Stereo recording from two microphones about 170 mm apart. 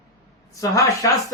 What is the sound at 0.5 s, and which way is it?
Speech, 20° left (ahead or behind).